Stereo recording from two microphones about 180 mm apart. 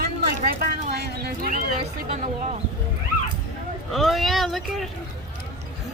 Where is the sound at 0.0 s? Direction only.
60° right (ahead or behind).